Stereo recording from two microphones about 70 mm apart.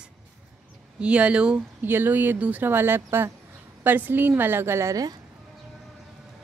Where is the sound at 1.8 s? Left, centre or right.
Right.